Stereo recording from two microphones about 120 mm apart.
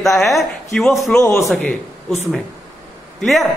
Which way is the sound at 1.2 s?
25° left (ahead or behind).